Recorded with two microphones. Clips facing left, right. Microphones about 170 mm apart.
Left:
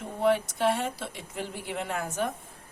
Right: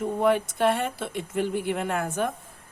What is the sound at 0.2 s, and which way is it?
Speech, 50° right (ahead or behind).